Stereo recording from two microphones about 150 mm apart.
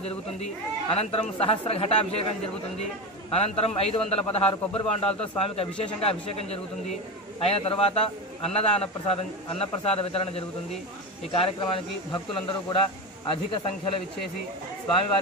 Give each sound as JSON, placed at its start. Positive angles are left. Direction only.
{"t": 0.8, "sound": "a man's voice", "side_deg": 40}
{"t": 3.3, "sound": "a man's voice", "side_deg": 45}
{"t": 13.3, "sound": "a man's voice", "side_deg": 35}